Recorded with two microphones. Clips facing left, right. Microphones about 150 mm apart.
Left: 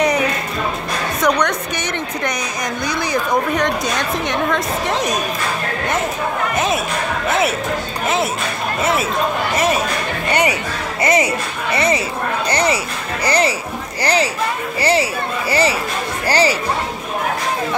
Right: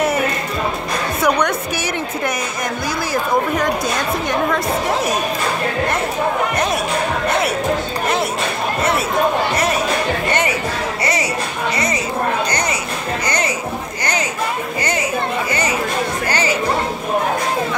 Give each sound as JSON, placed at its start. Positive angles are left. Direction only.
{"t": 0.0, "sound": "music", "side_deg": -5}
{"t": 3.1, "sound": "a woman's voice", "side_deg": 0}
{"t": 6.5, "sound": "a woman's voice", "side_deg": 0}
{"t": 11.7, "sound": "a sound", "side_deg": 25}
{"t": 14.8, "sound": "speech", "side_deg": 30}
{"t": 16.3, "sound": "speech", "side_deg": 35}